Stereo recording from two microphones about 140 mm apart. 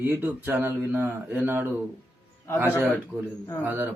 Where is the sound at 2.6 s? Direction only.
15° left (ahead or behind).